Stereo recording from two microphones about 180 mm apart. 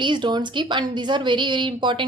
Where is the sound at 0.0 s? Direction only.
25° right (ahead or behind).